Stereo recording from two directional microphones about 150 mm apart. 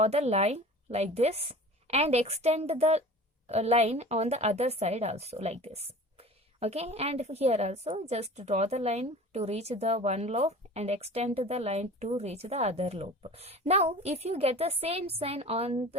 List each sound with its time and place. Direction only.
0.0 s a woman's voice: 45° right (ahead or behind)